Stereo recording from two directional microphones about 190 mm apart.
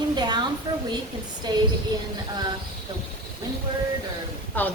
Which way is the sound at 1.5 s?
20° right (ahead or behind).